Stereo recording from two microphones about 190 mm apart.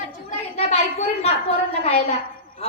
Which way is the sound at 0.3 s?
35° left (ahead or behind).